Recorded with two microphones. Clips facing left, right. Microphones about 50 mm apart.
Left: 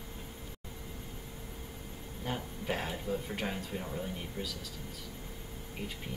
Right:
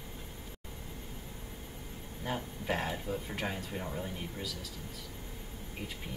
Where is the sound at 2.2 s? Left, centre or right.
Centre.